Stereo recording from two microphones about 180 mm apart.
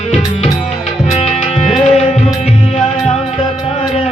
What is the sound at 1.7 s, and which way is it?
Music, 35° left (ahead or behind).